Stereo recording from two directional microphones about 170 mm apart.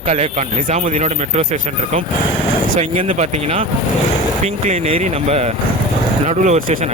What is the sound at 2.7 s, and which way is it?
Speech, 45° right (ahead or behind).